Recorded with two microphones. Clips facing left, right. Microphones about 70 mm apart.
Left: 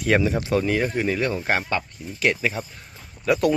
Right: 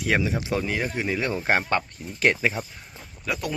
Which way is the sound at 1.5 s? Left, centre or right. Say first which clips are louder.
Right 1 dB; right.